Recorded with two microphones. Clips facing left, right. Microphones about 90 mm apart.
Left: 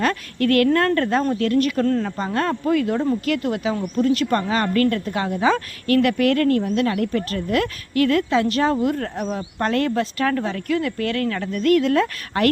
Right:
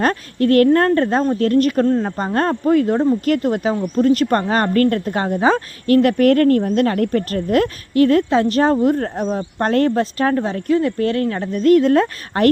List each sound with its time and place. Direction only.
0.0 s a woman's voice: 35° right (ahead or behind)